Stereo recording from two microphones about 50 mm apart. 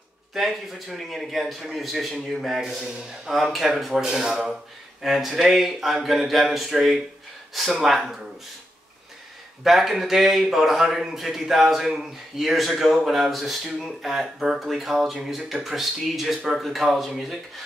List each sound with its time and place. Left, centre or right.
0.3 s a man's voice: centre
2.8 s a man's voice: centre
3.5 s a man's voice: centre
9.6 s a man's voice: centre